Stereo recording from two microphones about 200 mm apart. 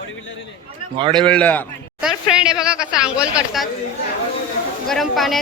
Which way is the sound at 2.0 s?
5° right (ahead or behind).